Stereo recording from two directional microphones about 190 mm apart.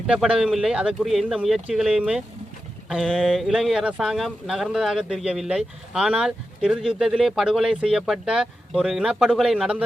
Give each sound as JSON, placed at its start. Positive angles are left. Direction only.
{"t": 0.1, "sound": "speech", "side_deg": -5}